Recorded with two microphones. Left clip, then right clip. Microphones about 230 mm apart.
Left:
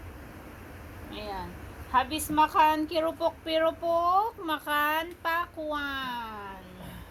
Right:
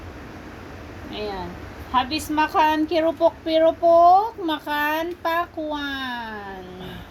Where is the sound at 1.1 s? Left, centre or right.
Left.